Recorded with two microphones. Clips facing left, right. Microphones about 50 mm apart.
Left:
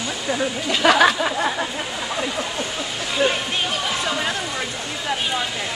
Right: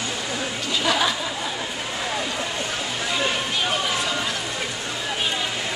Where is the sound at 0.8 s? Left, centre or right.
Left.